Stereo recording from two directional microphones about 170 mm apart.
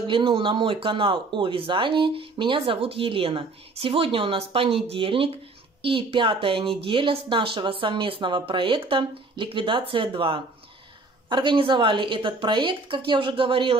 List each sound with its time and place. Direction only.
0.0 s a woman's voice: 30° right (ahead or behind)